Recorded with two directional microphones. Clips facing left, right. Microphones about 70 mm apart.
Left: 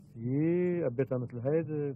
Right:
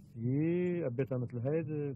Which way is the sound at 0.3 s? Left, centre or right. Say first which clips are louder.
Left 3 dB; left.